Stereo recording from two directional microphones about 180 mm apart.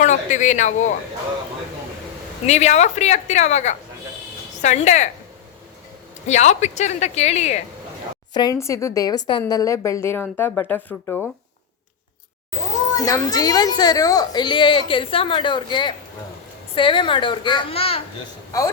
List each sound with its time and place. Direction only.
0.0 s a man's voice: 45° left (ahead or behind)
2.5 s a woman's voice: 40° left (ahead or behind)
6.2 s a woman's voice: 40° left (ahead or behind)
8.3 s speech: 20° left (ahead or behind)
13.0 s speech: 20° left (ahead or behind)
18.5 s speech: 20° left (ahead or behind)